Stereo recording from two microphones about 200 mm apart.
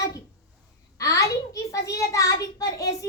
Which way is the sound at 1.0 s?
15° left (ahead or behind).